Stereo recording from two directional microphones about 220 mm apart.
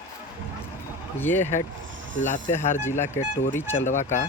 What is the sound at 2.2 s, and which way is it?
Speech, 35° left (ahead or behind).